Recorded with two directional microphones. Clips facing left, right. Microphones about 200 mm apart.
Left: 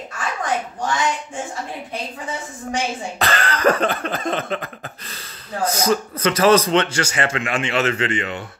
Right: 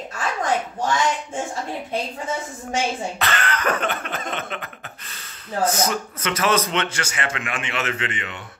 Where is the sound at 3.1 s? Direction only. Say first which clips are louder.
Left 3 dB; 35° left (ahead or behind).